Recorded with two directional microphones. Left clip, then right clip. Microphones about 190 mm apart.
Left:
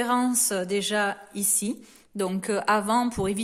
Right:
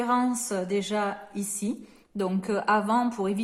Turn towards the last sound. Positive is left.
turn(degrees=35)  # may be behind; listen again after turning